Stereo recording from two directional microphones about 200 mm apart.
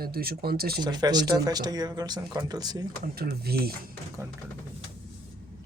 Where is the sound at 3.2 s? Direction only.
50° right (ahead or behind).